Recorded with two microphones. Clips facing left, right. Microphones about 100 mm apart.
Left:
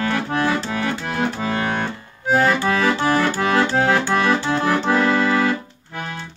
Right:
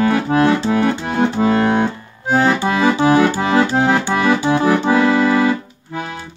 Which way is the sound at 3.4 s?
20° right (ahead or behind).